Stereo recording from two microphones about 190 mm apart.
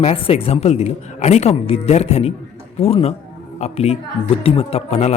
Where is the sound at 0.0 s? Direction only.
30° left (ahead or behind).